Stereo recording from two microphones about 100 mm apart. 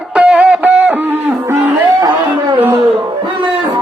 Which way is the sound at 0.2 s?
10° right (ahead or behind).